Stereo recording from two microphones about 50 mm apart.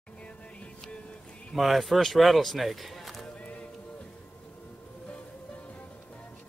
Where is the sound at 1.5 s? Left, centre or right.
Centre.